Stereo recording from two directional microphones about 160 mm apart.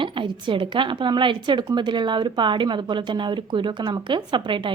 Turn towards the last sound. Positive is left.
turn(degrees=-30)  # may be behind; listen again after turning